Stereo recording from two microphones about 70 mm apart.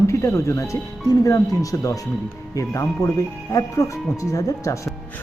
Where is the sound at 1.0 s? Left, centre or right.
Left.